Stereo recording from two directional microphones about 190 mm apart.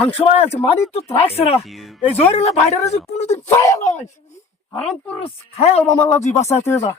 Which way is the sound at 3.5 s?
15° left (ahead or behind).